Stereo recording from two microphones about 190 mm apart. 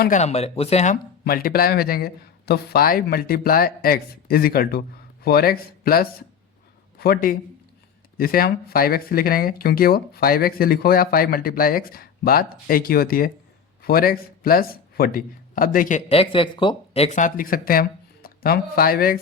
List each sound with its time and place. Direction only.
0.0 s speech: 40° left (ahead or behind)
1.2 s speech: 50° left (ahead or behind)